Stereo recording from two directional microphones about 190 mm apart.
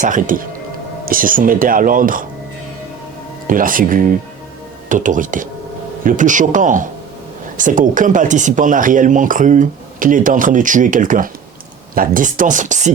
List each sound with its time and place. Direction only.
0.0 s speech: 45° right (ahead or behind)
3.4 s speech: 45° right (ahead or behind)